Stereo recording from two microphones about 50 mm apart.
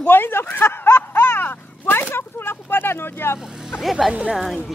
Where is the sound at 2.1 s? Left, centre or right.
Left.